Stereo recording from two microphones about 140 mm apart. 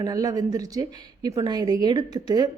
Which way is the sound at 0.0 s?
25° right (ahead or behind).